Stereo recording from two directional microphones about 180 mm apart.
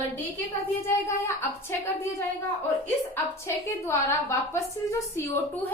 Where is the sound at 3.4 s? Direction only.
15° left (ahead or behind).